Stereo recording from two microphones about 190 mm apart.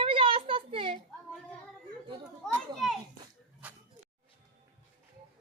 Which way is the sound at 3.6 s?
10° right (ahead or behind).